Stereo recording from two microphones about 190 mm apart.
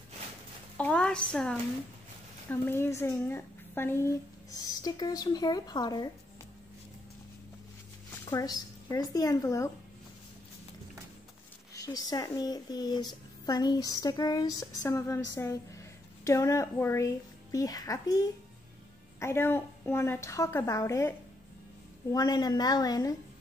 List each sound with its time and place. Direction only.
0.7 s a woman's voice: 5° left (ahead or behind)
8.3 s a woman's voice: 20° left (ahead or behind)
11.7 s speech: 20° left (ahead or behind)
19.1 s a woman's voice: 15° left (ahead or behind)
22.1 s a woman's voice: 20° left (ahead or behind)